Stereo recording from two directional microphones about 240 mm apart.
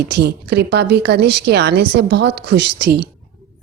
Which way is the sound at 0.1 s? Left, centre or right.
Right.